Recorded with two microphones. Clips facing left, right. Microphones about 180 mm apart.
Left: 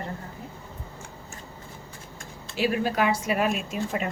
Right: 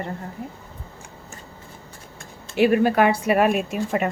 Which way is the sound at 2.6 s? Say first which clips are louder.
Right 7 dB; 60° right (ahead or behind).